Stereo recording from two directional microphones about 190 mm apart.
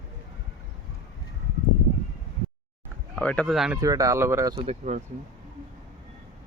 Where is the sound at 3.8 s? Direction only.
20° right (ahead or behind).